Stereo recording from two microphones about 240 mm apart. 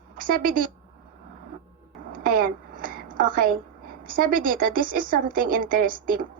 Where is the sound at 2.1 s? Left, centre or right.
Right.